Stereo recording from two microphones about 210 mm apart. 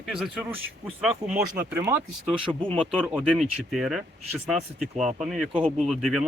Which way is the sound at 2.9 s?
Centre (ahead or behind).